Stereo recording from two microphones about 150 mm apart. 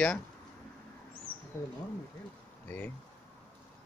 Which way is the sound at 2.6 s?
10° left (ahead or behind).